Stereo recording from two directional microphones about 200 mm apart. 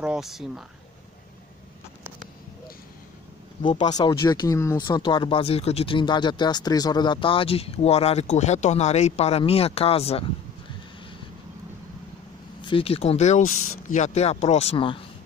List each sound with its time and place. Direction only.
0.0 s speech: centre (ahead or behind)
3.6 s speech: 20° left (ahead or behind)
12.6 s speech: 25° left (ahead or behind)